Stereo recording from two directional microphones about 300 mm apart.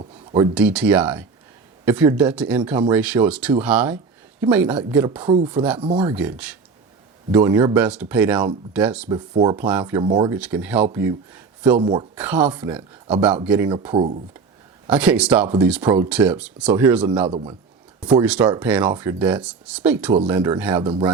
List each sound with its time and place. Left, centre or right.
0.0 s a sound: centre
0.5 s speech: centre
5.2 s speech: centre
6.1 s speech: centre
10.3 s speech: centre
14.8 s speech: centre
17.2 s speech: centre
18.0 s speech: centre
20.8 s speech: centre